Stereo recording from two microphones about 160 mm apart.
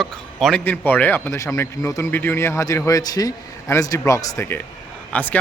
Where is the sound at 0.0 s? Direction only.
Centre (ahead or behind).